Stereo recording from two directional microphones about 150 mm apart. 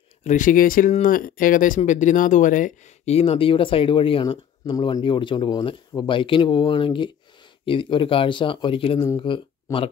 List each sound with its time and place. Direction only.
0.2 s speech: 55° left (ahead or behind)
3.2 s speech: 40° left (ahead or behind)